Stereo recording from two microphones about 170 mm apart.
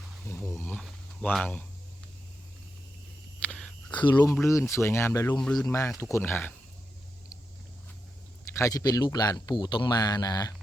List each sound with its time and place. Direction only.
0.3 s speech: 15° left (ahead or behind)
3.4 s whispering: 5° left (ahead or behind)
3.8 s speech: 25° left (ahead or behind)
5.4 s speech: centre (ahead or behind)
5.6 s speech: 15° left (ahead or behind)
8.5 s speech: 20° left (ahead or behind)